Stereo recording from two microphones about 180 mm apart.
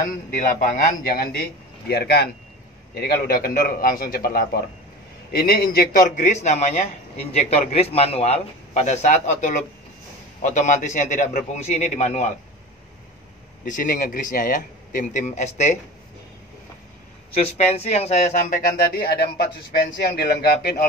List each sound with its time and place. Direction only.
0.6 s a man's voice: 45° left (ahead or behind)
13.7 s speech: 45° left (ahead or behind)
17.3 s a man's voice: 35° left (ahead or behind)
18.9 s a man's voice: 60° left (ahead or behind)